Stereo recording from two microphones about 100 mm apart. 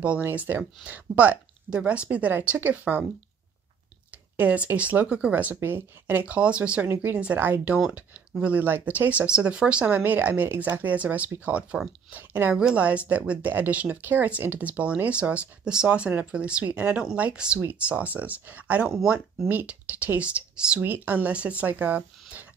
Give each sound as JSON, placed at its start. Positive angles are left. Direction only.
{"t": 0.2, "sound": "speech", "side_deg": -20}
{"t": 4.1, "sound": "speech", "side_deg": -15}